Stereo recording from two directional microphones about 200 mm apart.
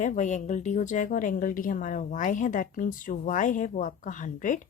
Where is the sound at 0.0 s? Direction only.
40° left (ahead or behind).